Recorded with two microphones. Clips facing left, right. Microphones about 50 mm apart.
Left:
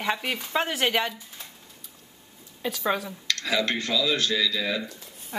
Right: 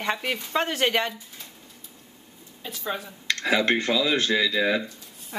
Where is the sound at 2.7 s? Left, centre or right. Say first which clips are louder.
Left 4 dB; left.